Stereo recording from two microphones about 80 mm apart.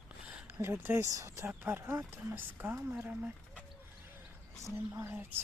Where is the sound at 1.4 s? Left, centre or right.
Right.